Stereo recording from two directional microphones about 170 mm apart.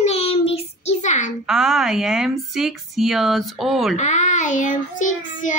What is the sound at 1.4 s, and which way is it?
Speech, centre (ahead or behind).